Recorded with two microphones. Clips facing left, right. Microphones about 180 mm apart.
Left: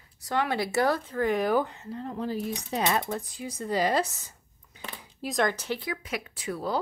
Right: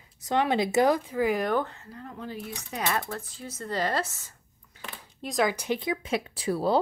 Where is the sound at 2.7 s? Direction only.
20° left (ahead or behind).